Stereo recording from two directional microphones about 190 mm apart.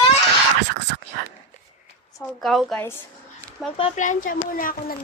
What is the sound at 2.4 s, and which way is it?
Speech, centre (ahead or behind).